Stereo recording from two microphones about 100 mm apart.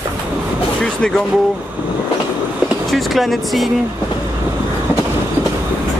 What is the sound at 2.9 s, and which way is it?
Speech, centre (ahead or behind).